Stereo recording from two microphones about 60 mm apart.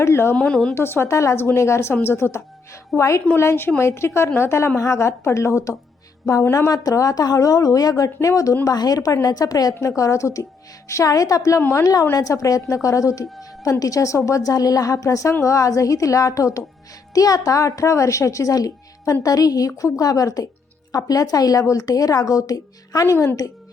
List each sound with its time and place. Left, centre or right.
0.0 s a woman's voice: left
0.3 s speech: centre
0.7 s a woman's voice: left
2.9 s a woman's voice: centre
3.3 s a woman's voice: left
6.7 s a woman's voice: left
8.3 s a woman's voice: left
8.6 s a woman's voice: left
9.8 s a woman's voice: left
11.7 s a woman's voice: left
12.1 s a woman's voice: left
17.2 s a woman's voice: left
19.2 s a woman's voice: left
23.0 s a woman's voice: left